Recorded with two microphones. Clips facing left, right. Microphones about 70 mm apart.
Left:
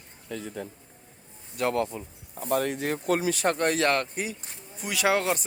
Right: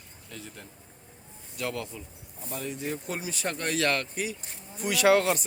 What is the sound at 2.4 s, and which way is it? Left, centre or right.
Speech, left.